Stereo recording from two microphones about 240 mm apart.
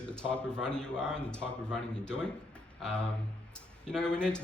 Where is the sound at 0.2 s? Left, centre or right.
Centre.